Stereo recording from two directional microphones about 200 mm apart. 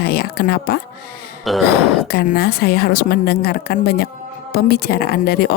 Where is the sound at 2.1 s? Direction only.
50° left (ahead or behind).